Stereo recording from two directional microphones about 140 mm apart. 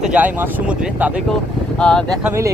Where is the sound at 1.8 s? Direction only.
5° left (ahead or behind).